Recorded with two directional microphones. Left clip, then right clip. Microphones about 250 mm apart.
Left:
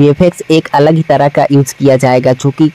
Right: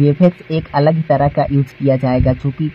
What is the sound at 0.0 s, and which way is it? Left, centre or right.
Speech, centre.